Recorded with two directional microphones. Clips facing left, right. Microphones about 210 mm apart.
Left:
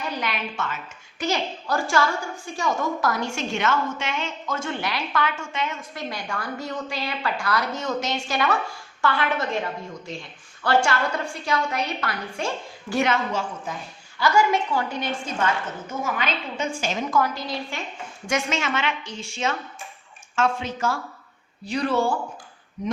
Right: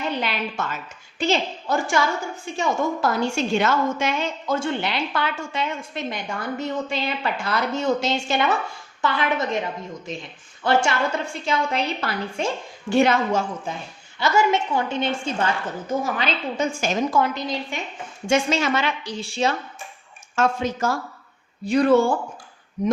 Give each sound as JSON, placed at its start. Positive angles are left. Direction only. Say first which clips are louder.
{"t": 0.0, "sound": "a woman's voice", "louder": "right 3 dB", "side_deg": -25}
{"t": 18.3, "sound": "a woman's voice", "louder": "right 5 dB", "side_deg": -30}